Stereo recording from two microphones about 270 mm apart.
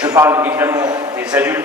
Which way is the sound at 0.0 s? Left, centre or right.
Centre.